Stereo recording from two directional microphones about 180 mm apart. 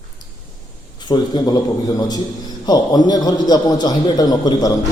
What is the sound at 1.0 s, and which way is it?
A man's voice, 25° left (ahead or behind).